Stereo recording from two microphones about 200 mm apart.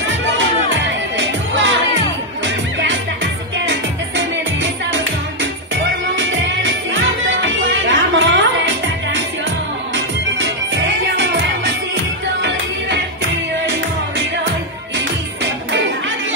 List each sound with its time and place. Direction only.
0.0 s music: 65° right (ahead or behind)
6.1 s music: 70° right (ahead or behind)